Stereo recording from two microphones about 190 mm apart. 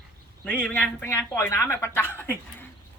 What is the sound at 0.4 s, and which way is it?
Speech, 5° left (ahead or behind).